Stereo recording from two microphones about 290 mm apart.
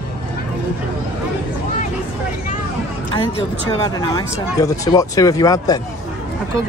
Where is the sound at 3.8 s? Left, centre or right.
Centre.